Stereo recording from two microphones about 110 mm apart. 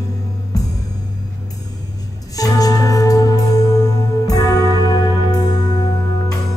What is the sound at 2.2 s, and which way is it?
Music, 35° left (ahead or behind).